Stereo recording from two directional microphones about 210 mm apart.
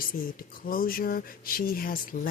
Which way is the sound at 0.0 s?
45° left (ahead or behind).